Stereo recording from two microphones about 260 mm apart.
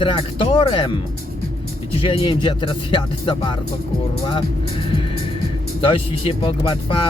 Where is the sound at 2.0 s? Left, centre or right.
Centre.